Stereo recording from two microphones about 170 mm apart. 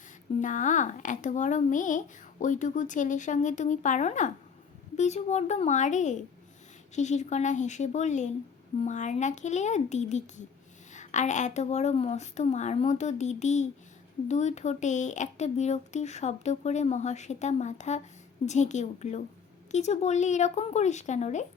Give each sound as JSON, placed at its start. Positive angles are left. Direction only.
{"t": 0.3, "sound": "speech", "side_deg": 45}